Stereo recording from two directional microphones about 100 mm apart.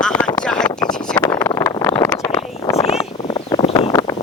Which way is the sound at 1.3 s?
35° left (ahead or behind).